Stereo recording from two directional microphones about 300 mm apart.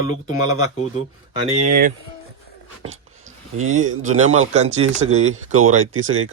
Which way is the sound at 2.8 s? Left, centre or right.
Right.